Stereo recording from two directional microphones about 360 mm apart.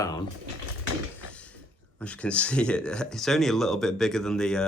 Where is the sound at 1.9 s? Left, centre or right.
Centre.